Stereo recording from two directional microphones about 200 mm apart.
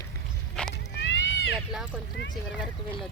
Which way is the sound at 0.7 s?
60° left (ahead or behind).